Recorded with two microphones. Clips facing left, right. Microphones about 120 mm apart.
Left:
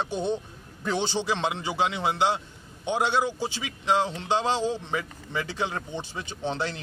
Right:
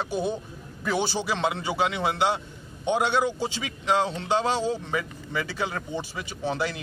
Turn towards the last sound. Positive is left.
turn(degrees=25)  # may be behind; listen again after turning